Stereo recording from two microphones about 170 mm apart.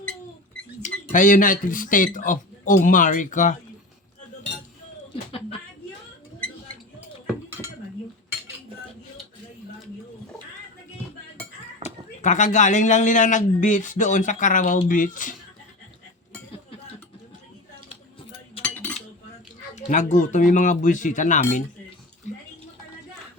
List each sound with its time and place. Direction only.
0.8 s speech: 50° left (ahead or behind)
11.8 s a sound: 30° right (ahead or behind)
12.2 s a man's voice: 45° left (ahead or behind)
18.6 s cutlery: 10° left (ahead or behind)
19.7 s a man's voice: 45° left (ahead or behind)